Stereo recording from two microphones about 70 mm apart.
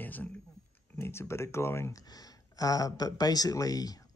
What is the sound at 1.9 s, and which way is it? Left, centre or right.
Speech, left.